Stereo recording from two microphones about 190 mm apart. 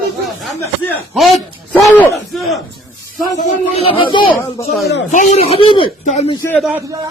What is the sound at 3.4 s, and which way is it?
Speech, 30° left (ahead or behind).